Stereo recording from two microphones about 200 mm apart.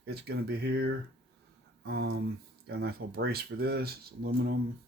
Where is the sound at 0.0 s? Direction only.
55° right (ahead or behind).